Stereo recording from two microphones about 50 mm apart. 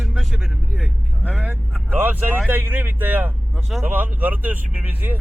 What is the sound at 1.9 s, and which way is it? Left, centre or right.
Speech, right.